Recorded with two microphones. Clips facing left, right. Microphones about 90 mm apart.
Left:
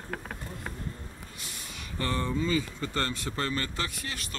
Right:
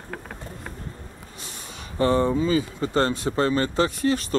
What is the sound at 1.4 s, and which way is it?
Speech, 30° right (ahead or behind).